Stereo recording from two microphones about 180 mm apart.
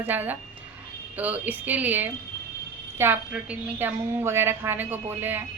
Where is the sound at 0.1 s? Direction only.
10° right (ahead or behind).